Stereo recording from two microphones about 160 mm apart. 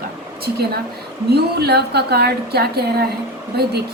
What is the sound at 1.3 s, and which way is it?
A woman's voice, 90° right.